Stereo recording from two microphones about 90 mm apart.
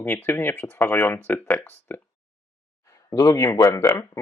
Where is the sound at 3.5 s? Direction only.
40° left (ahead or behind).